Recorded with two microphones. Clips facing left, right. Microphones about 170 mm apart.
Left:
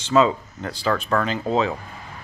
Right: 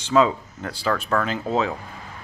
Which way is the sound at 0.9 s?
5° left (ahead or behind).